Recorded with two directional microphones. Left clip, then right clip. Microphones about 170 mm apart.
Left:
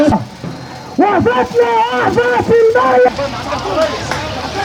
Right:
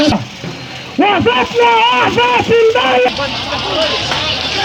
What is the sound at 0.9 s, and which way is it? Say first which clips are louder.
Speech: even; 25° left (ahead or behind).